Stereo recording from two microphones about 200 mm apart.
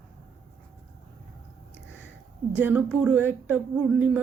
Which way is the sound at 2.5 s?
5° right (ahead or behind).